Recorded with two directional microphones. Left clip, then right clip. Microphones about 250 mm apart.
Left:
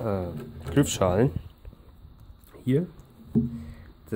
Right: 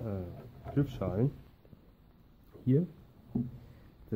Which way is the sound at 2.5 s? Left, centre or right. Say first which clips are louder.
Left 4 dB; centre.